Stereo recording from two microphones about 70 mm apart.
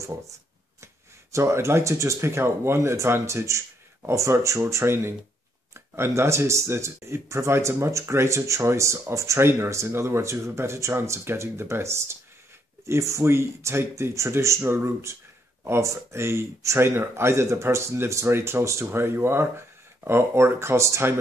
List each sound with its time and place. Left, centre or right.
1.3 s speech: right